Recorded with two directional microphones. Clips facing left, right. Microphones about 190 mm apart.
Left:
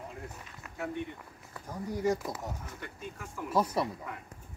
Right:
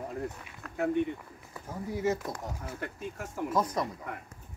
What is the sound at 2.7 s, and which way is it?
Speech, 45° right (ahead or behind).